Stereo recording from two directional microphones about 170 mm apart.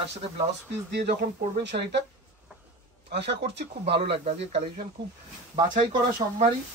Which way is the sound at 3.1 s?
80° right.